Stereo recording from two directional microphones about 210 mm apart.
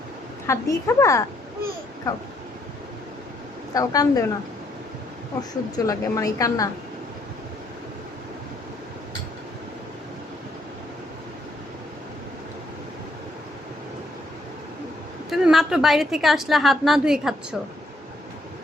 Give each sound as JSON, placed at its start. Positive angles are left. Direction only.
{"t": 0.4, "sound": "a woman's voice", "side_deg": 15}
{"t": 3.8, "sound": "a woman's voice", "side_deg": 15}
{"t": 5.4, "sound": "a woman's voice", "side_deg": 15}
{"t": 15.3, "sound": "a woman's voice", "side_deg": 0}